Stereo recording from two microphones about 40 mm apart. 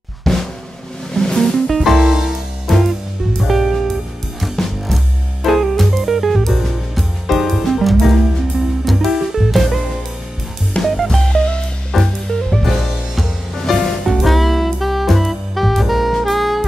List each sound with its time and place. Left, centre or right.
0.3 s drum: centre
1.1 s music: centre
2.0 s music: centre
2.7 s music: centre
10.8 s music: left
11.1 s music: centre
11.3 s music: left
11.9 s music: centre
12.6 s music: centre